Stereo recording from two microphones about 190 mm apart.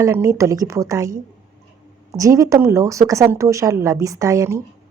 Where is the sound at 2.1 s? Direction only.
15° right (ahead or behind).